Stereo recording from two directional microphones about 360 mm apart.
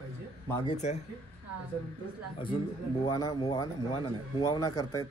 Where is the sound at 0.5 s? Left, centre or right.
Centre.